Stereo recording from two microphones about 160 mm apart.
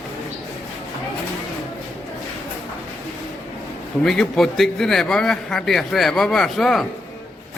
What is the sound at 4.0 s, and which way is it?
A man's voice, 5° left (ahead or behind).